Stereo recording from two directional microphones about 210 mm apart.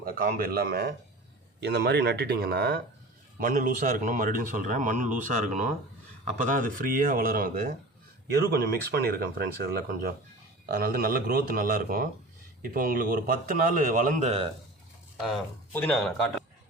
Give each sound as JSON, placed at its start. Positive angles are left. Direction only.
{"t": 0.0, "sound": "speech", "side_deg": -45}
{"t": 6.4, "sound": "speech", "side_deg": -40}
{"t": 15.2, "sound": "speech", "side_deg": 5}